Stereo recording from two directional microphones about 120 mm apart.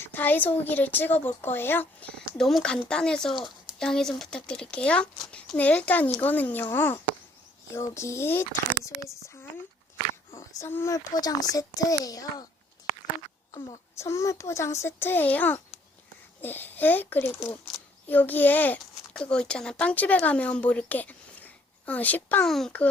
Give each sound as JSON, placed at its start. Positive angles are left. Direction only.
{"t": 0.0, "sound": "speech", "side_deg": 15}
{"t": 10.3, "sound": "a sound", "side_deg": 25}
{"t": 10.9, "sound": "a child's voice", "side_deg": 30}
{"t": 13.5, "sound": "speech", "side_deg": 35}
{"t": 14.0, "sound": "a child's voice", "side_deg": 25}
{"t": 22.4, "sound": "speech", "side_deg": 0}